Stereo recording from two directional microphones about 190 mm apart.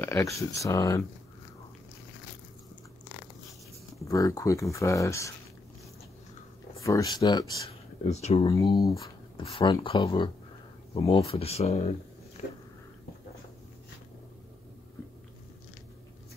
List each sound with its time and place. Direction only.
0.0 s speech: 15° left (ahead or behind)
4.0 s speech: 15° left (ahead or behind)
6.8 s speech: 15° left (ahead or behind)
8.1 s speech: 35° left (ahead or behind)
8.8 s speech: 15° left (ahead or behind)
9.4 s speech: 30° left (ahead or behind)
12.4 s a sound: 35° left (ahead or behind)